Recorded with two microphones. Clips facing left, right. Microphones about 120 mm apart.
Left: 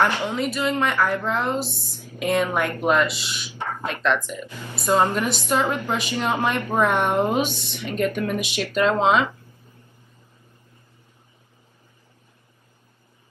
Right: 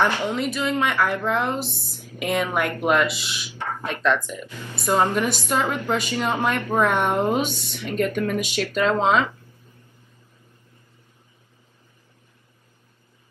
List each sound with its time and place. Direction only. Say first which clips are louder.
0.0 s speech: even; 15° left (ahead or behind)
0.7 s a woman's voice: right 1 dB; centre (ahead or behind)
3.5 s a sound: even; 15° left (ahead or behind)
4.8 s speech: even; 15° left (ahead or behind)